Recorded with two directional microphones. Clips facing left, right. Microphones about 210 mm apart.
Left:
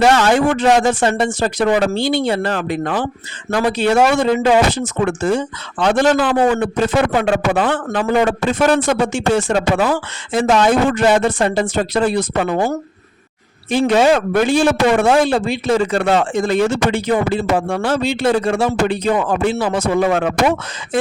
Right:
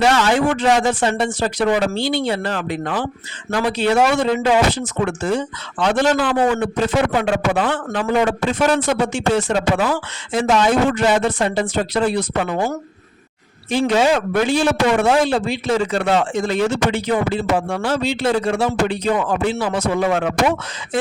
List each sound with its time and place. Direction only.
0.0 s speech: 50° left (ahead or behind)
13.7 s speech: 55° left (ahead or behind)